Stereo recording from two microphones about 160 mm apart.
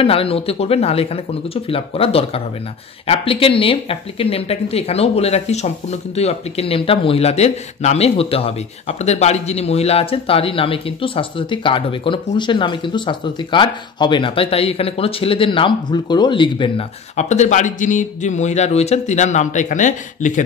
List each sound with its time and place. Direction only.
0.0 s speech: 35° left (ahead or behind)
17.2 s a man's voice: 45° left (ahead or behind)